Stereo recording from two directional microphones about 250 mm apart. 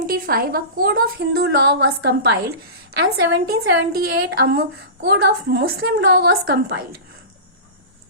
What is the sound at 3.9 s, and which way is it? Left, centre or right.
A woman's voice, right.